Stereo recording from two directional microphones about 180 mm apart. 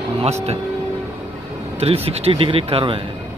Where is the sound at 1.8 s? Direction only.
35° right (ahead or behind).